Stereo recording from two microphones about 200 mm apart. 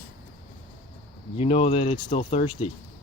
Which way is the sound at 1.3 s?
30° left (ahead or behind).